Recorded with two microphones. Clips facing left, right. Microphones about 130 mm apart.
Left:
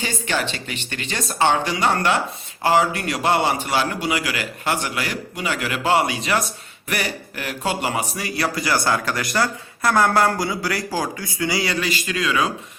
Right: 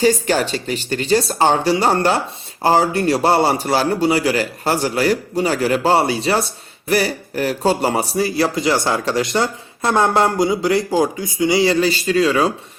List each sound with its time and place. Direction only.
0.0 s a man's voice: 40° right (ahead or behind)